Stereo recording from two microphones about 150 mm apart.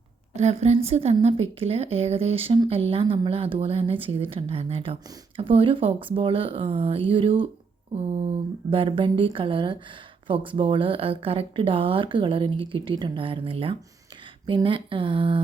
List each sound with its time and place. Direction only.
0.3 s a woman's voice: 45° right (ahead or behind)